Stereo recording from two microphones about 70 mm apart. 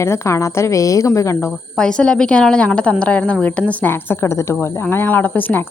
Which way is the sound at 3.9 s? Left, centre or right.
Left.